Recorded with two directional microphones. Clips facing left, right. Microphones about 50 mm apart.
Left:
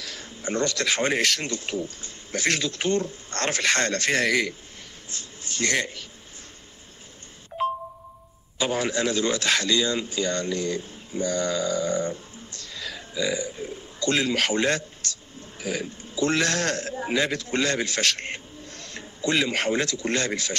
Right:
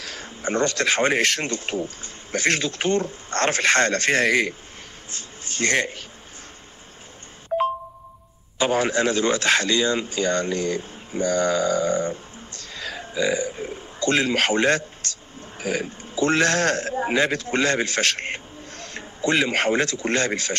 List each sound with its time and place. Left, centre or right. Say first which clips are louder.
0.0 s speech: right 4 dB; right
8.5 s a man's voice: right 4 dB; right